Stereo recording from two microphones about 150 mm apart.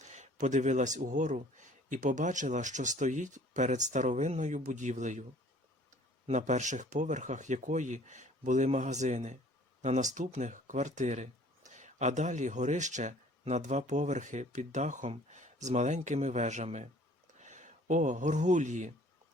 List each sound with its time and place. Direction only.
0.0 s speech: 50° right (ahead or behind)
6.2 s speech: 50° right (ahead or behind)